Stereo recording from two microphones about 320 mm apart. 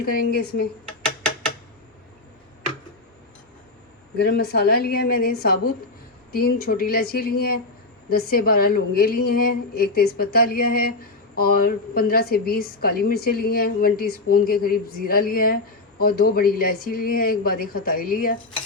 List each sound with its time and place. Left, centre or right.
0.0 s a woman's voice: left
1.0 s a sound: centre
4.2 s a woman's voice: left